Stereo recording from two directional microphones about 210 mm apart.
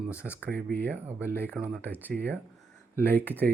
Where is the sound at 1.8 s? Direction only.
10° left (ahead or behind).